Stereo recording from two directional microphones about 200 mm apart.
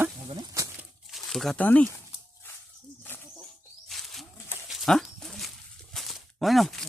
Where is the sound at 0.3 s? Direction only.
20° right (ahead or behind).